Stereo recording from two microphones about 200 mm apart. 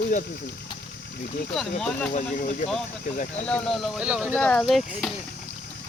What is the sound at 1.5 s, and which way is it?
Speech, 5° left (ahead or behind).